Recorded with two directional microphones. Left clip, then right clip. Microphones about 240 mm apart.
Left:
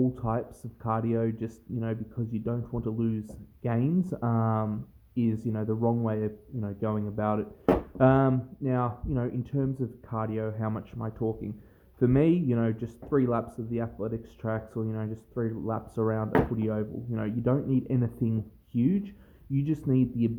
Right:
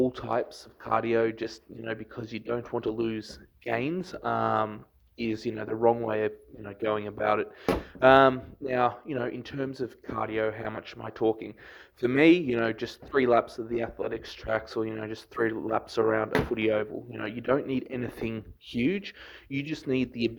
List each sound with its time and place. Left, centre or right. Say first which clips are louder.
0.0 s speech: right 3 dB; right